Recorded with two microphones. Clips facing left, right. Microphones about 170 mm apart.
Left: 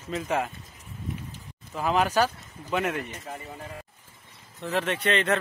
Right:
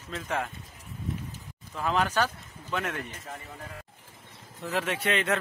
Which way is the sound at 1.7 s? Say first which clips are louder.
Left 3 dB; 10° left (ahead or behind).